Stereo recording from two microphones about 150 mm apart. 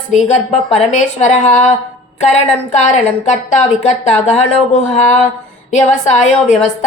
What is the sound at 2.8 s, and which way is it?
A woman's voice, 50° left (ahead or behind).